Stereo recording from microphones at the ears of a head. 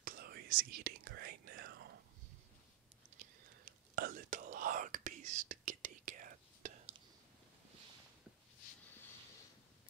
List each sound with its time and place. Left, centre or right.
0.0 s whispering: right
3.2 s whispering: right